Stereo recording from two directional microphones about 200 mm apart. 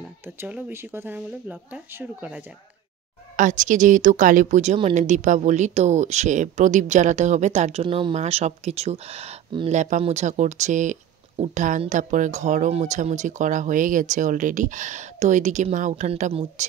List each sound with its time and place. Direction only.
0.4 s speech: 10° right (ahead or behind)
3.3 s speech: 40° right (ahead or behind)